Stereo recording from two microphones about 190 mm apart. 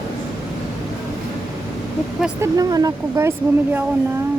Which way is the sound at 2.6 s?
20° right (ahead or behind).